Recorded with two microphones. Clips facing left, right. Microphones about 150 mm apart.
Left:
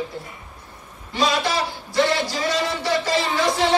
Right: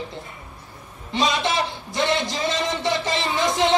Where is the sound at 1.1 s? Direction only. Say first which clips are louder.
Left 1 dB; 20° right (ahead or behind).